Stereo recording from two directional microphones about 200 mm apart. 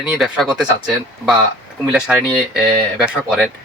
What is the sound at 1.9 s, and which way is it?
Speech, 5° right (ahead or behind).